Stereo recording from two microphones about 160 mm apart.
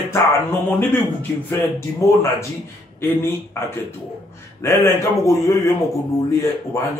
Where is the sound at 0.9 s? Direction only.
15° left (ahead or behind).